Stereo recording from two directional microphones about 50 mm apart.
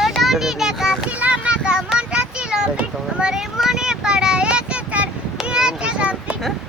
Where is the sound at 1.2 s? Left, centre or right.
Right.